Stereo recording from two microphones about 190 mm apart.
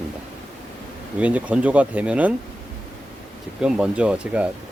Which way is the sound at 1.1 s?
5° right (ahead or behind).